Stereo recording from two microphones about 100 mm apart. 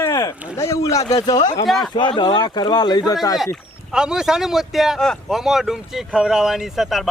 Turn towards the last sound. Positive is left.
turn(degrees=0)  # may be behind; listen again after turning